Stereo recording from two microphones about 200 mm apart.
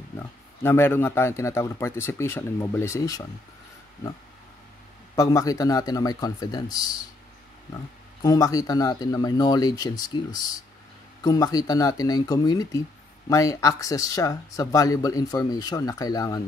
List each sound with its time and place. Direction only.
0.6 s speech: 10° left (ahead or behind)
5.1 s speech: 15° left (ahead or behind)